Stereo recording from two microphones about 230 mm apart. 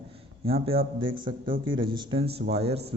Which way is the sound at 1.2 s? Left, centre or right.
Right.